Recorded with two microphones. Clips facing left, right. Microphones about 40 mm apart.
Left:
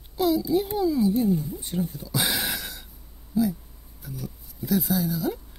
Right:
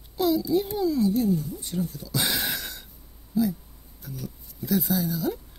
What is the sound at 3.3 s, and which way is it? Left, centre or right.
Speech, centre.